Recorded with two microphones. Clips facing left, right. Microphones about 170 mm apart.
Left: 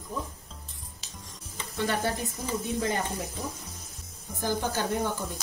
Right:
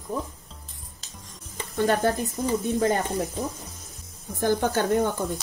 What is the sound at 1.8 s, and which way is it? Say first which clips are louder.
Speech: right 6 dB; 40° right (ahead or behind).